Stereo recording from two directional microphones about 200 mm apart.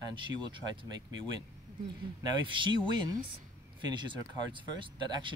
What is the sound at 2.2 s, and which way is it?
Speech, 25° right (ahead or behind).